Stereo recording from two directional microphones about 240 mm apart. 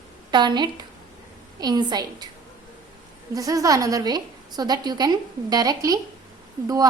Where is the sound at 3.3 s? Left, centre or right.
Centre.